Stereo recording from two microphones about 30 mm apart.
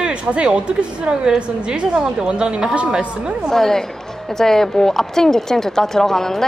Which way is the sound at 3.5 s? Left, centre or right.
Centre.